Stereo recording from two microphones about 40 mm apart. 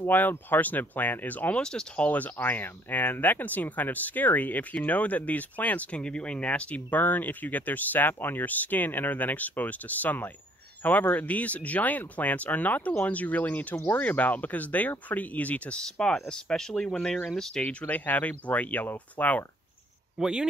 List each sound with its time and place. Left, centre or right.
0.0 s speech: left
1.6 s speech: centre
2.0 s speech: left
2.3 s speech: left
6.9 s speech: left
15.8 s speech: centre
17.7 s speech: left
20.2 s speech: right